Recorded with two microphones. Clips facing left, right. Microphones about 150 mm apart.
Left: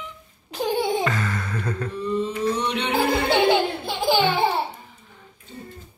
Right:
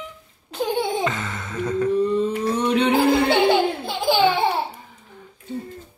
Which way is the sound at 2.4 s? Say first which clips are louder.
Right 4 dB; 45° right (ahead or behind).